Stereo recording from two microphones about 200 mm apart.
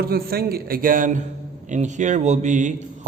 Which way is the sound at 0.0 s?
50° right (ahead or behind).